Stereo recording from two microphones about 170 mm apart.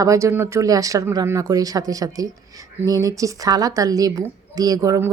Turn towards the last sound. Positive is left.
turn(degrees=-20)  # may be behind; listen again after turning